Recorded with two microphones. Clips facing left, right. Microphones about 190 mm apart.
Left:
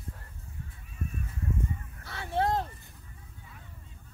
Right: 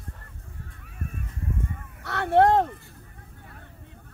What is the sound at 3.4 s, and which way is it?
Vehicle, 65° right (ahead or behind).